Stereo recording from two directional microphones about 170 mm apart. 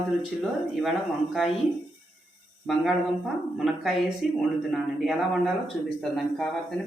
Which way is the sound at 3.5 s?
Centre (ahead or behind).